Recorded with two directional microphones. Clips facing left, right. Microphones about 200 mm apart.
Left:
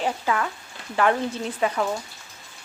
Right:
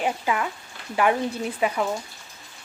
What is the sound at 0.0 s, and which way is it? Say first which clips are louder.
Speech: even; 15° right (ahead or behind).